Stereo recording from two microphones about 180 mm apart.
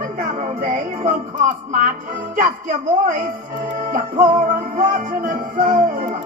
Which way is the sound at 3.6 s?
50° right (ahead or behind).